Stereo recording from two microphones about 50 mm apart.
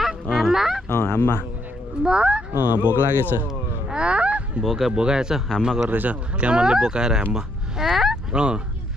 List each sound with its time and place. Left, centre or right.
0.0 s fowl: centre
0.8 s speech: left
2.0 s speech: centre
2.5 s speech: right
3.9 s a sound: right
4.6 s speech: centre
4.9 s speech: centre
5.9 s speech: right
6.3 s speech: right
7.9 s fowl: centre
8.3 s speech: centre